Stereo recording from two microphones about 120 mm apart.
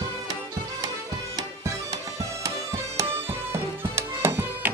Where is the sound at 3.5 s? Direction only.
20° right (ahead or behind).